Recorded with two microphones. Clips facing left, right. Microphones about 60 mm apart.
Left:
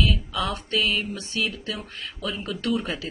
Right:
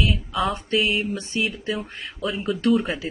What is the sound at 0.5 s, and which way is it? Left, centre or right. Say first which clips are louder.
Speech: right 3 dB; centre.